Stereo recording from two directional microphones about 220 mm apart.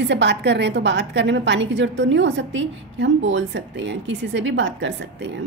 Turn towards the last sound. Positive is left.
turn(degrees=-55)  # may be behind; listen again after turning